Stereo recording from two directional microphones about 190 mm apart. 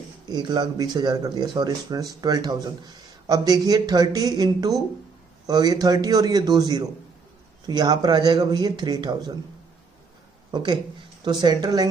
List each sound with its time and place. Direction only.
0.3 s speech: 20° right (ahead or behind)
10.5 s speech: 25° right (ahead or behind)